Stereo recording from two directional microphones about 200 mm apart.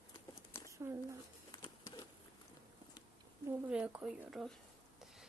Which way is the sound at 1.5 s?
20° left (ahead or behind).